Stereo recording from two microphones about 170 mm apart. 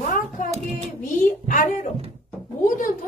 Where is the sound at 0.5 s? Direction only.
40° right (ahead or behind).